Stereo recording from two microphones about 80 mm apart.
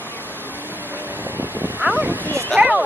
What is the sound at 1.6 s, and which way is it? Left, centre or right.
Vehicle, right.